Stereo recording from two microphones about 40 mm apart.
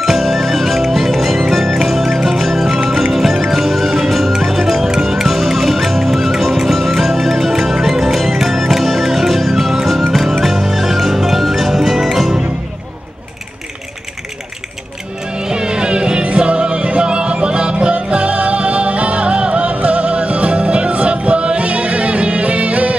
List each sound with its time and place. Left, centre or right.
0.0 s music: centre
15.3 s music: right